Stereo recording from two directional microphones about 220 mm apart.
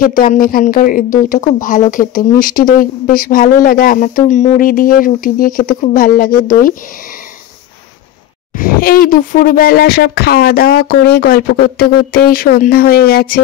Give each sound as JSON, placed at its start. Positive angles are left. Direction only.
{"t": 0.0, "sound": "speech", "side_deg": 40}
{"t": 8.5, "sound": "speech", "side_deg": 40}